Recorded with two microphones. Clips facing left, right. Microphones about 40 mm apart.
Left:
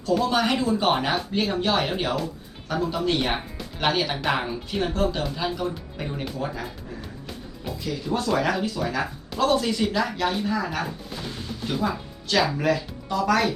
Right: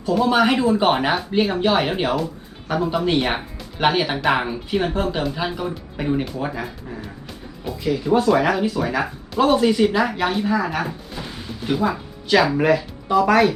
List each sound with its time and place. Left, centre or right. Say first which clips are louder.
0.1 s speech: right 5 dB; centre
7.9 s speech: right 8 dB; centre